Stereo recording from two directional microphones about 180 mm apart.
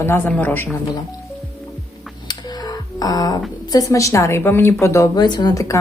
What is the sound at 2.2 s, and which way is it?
Music, 20° left (ahead or behind).